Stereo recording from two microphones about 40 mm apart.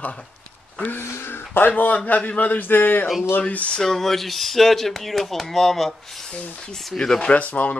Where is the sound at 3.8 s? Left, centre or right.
Centre.